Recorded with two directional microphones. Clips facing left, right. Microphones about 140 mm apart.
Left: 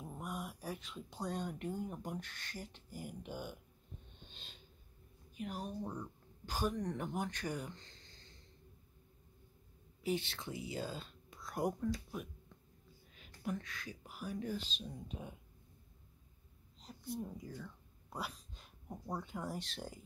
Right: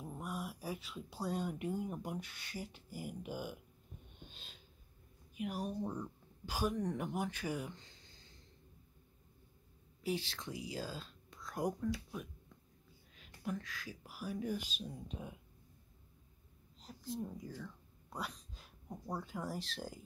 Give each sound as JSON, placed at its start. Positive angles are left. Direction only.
{"t": 0.0, "sound": "speech", "side_deg": 0}
{"t": 4.2, "sound": "snort", "side_deg": -5}
{"t": 5.3, "sound": "speech", "side_deg": -5}
{"t": 10.0, "sound": "speech", "side_deg": 0}
{"t": 15.0, "sound": "speech", "side_deg": 0}
{"t": 16.9, "sound": "a sound", "side_deg": 0}
{"t": 17.2, "sound": "speech", "side_deg": 0}